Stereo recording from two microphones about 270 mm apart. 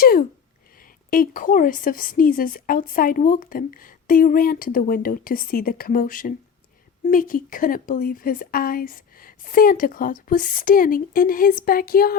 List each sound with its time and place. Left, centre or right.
0.0 s a woman's voice: left